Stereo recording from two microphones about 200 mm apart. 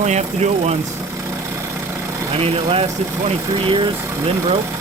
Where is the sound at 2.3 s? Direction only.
30° right (ahead or behind).